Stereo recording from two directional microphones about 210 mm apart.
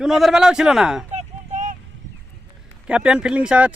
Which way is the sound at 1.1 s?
35° right (ahead or behind).